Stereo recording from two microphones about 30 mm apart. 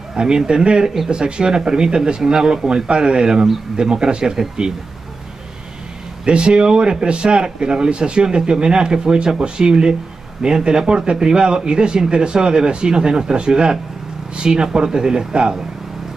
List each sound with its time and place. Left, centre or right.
0.2 s a man's voice: right
6.2 s a man's voice: right